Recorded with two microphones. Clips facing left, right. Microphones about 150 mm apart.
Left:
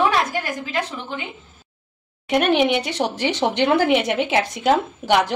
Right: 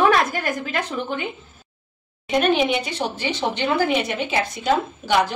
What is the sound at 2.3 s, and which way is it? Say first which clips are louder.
A woman's voice: left 1 dB; 70° left (ahead or behind).